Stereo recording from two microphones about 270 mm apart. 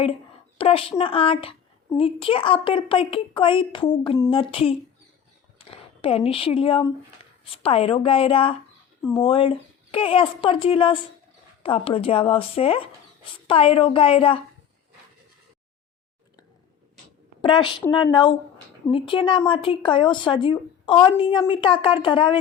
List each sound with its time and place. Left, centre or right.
0.6 s a woman's voice: left
17.4 s speech: centre